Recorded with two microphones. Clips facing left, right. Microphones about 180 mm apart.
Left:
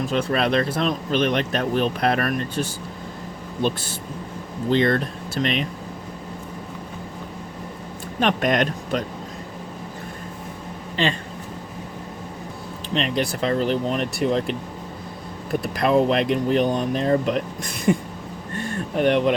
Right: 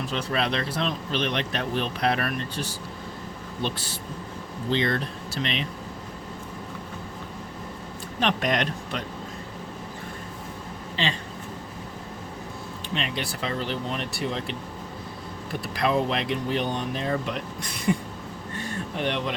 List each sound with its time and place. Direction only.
0.1 s speech: 50° left (ahead or behind)
8.2 s speech: 50° left (ahead or behind)
11.0 s speech: 50° left (ahead or behind)
12.9 s speech: 45° left (ahead or behind)
15.6 s speech: 50° left (ahead or behind)
18.5 s a sound: 50° left (ahead or behind)